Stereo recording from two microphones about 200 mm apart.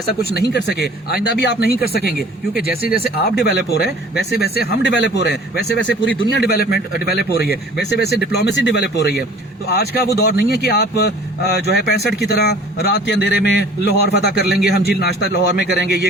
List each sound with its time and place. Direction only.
0.3 s a man's voice: 55° left (ahead or behind)